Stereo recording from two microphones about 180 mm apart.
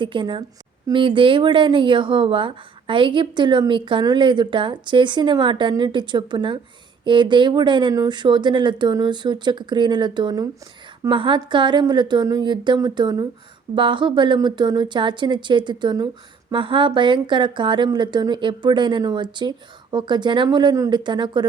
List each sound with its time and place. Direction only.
0.0 s speech: 25° right (ahead or behind)